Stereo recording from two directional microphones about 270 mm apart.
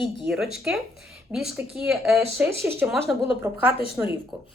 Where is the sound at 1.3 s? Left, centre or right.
Centre.